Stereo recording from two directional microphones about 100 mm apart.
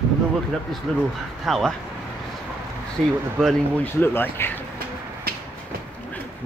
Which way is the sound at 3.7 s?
20° left (ahead or behind).